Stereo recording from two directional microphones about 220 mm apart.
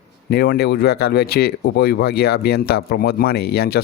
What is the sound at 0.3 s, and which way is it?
Speech, 45° left (ahead or behind).